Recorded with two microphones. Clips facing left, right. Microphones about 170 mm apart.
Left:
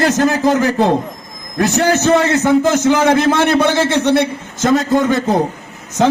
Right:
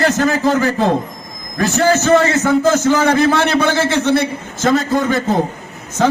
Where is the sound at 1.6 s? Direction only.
20° left (ahead or behind).